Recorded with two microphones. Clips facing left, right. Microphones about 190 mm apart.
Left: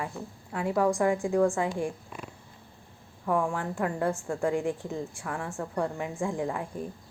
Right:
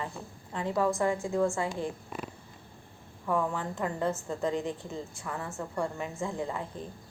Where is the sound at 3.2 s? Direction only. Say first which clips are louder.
Left 2 dB; 10° left (ahead or behind).